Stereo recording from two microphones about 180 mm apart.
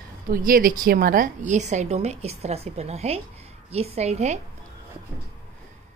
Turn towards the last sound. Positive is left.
turn(degrees=-40)  # may be behind; listen again after turning